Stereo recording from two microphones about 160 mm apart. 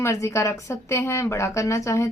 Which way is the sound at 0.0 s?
20° left (ahead or behind).